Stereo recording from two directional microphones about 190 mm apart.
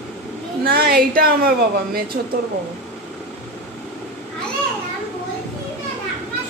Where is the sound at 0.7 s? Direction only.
55° right (ahead or behind).